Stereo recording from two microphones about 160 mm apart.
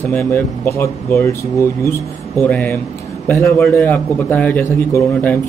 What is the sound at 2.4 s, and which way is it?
Speech, 10° left (ahead or behind).